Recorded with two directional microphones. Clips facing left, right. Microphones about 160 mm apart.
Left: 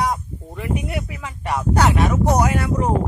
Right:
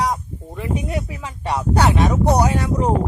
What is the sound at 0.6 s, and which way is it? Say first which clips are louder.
Speech: right 1 dB; 25° right (ahead or behind).